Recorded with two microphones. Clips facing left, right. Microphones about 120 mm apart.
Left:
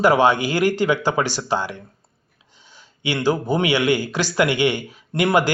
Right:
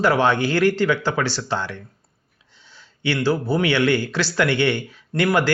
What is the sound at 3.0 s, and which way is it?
Speech, 15° left (ahead or behind).